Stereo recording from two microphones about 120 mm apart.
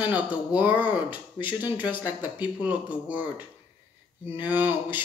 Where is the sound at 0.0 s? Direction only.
10° right (ahead or behind).